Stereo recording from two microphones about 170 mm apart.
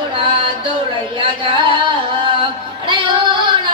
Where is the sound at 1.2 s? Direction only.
30° right (ahead or behind).